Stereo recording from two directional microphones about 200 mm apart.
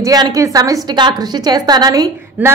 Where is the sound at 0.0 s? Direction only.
20° right (ahead or behind).